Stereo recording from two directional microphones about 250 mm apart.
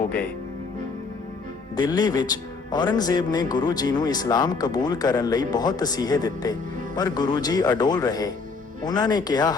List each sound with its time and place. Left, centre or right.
1.7 s speech: centre